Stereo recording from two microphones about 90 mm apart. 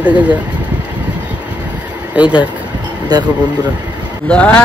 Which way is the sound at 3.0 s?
50° right (ahead or behind).